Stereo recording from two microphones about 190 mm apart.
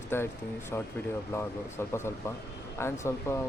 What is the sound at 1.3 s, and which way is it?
Speech, 15° left (ahead or behind).